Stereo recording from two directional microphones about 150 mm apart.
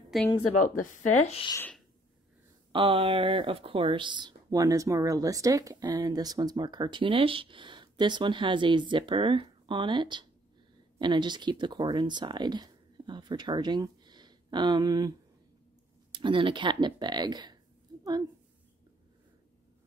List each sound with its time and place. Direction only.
0.1 s a woman's voice: centre (ahead or behind)
0.7 s speech: 45° left (ahead or behind)
2.7 s speech: 35° right (ahead or behind)